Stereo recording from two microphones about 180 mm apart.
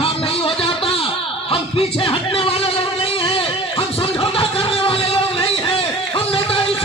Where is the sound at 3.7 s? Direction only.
30° left (ahead or behind).